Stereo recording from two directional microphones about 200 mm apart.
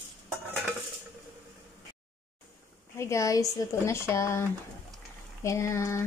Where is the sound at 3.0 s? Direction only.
15° left (ahead or behind).